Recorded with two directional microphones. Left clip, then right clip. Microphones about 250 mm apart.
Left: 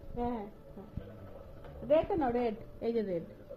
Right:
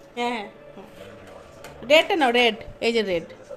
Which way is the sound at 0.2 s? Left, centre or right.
Right.